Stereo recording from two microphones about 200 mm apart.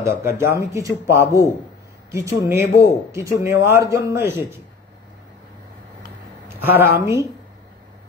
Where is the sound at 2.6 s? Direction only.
55° left (ahead or behind).